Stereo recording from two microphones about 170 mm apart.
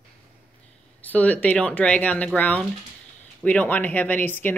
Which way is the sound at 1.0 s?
10° left (ahead or behind).